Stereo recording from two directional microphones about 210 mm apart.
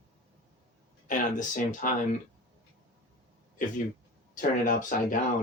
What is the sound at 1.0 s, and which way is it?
Speech, 40° left (ahead or behind).